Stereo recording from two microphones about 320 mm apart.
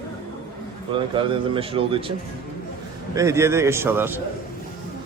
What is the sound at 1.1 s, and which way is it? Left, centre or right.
Speech, centre.